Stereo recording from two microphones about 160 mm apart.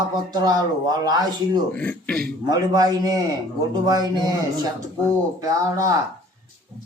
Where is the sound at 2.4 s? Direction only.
25° right (ahead or behind).